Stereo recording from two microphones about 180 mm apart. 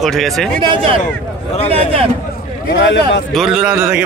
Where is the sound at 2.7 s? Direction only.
75° left (ahead or behind).